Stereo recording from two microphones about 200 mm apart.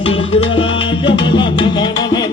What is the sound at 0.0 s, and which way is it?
Music, 30° left (ahead or behind).